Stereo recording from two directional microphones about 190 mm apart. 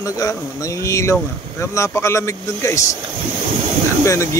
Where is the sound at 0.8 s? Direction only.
15° left (ahead or behind).